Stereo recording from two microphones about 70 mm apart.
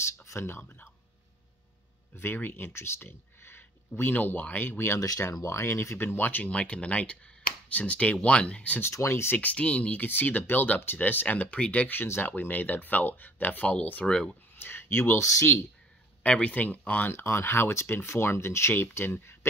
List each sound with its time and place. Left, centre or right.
0.0 s speech: left
0.6 s speech: left
2.1 s speech: left
6.5 s speech: centre
8.9 s speech: left
9.4 s speech: centre
14.5 s speech: left
16.2 s speech: centre
17.1 s speech: left